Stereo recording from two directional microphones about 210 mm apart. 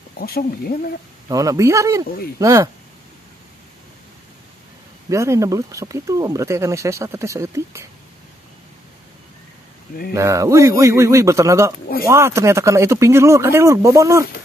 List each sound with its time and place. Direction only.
0.2 s speech: 45° left (ahead or behind)
1.3 s speech: 15° right (ahead or behind)
5.1 s speech: 15° right (ahead or behind)
10.1 s speech: 15° right (ahead or behind)